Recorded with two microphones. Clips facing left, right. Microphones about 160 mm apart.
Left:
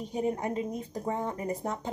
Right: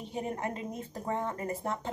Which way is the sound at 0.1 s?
15° left (ahead or behind).